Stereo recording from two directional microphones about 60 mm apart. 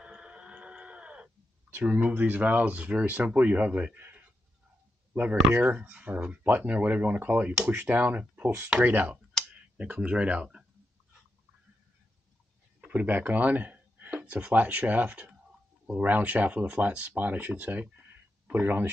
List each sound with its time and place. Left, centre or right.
0.0 s a sound: centre
1.9 s speech: right
12.8 s speech: right